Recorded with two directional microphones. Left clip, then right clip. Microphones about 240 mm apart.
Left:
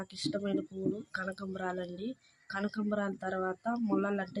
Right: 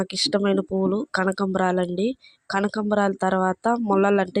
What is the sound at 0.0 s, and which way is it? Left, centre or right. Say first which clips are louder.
Speech: right 14 dB; right.